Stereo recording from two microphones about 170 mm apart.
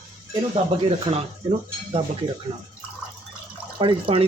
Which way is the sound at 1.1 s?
35° right (ahead or behind).